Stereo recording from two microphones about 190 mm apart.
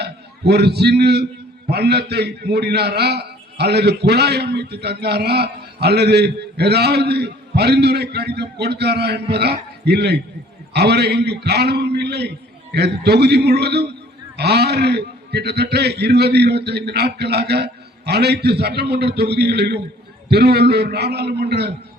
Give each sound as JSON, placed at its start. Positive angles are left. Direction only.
{"t": 0.0, "sound": "a man's voice", "side_deg": -60}